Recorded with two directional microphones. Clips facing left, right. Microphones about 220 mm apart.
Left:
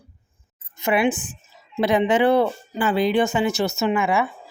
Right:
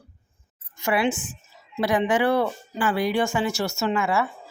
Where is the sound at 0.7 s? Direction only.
20° left (ahead or behind).